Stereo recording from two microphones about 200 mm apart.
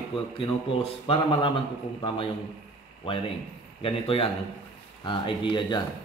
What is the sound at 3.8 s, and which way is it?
Speech, 25° left (ahead or behind).